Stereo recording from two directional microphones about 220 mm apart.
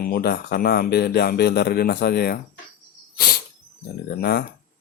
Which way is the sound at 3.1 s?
45° left (ahead or behind).